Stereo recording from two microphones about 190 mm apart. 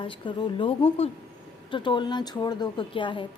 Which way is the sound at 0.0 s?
25° left (ahead or behind).